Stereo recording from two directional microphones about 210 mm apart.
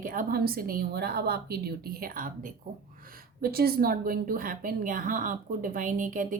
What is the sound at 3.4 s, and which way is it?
A woman's voice, 45° right (ahead or behind).